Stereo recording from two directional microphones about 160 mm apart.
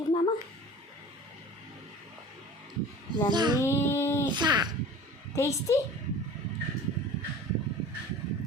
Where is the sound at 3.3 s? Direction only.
25° right (ahead or behind).